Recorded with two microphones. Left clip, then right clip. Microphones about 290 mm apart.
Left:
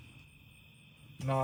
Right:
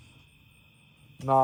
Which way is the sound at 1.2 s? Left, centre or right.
Centre.